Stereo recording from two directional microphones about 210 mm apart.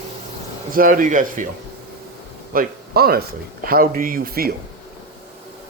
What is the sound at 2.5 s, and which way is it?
A man's voice, 45° right (ahead or behind).